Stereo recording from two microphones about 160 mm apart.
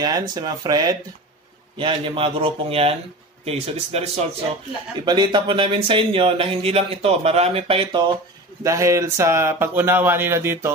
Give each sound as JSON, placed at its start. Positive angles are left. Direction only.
{"t": 0.0, "sound": "speech", "side_deg": -25}
{"t": 4.9, "sound": "speech", "side_deg": -25}
{"t": 8.6, "sound": "speech", "side_deg": -20}